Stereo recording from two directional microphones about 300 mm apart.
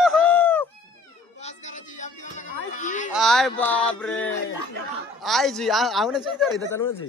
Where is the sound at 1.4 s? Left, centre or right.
Left.